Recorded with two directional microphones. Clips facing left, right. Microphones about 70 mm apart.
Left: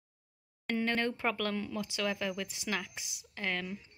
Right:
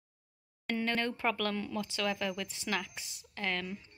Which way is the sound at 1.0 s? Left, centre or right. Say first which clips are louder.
Even; centre.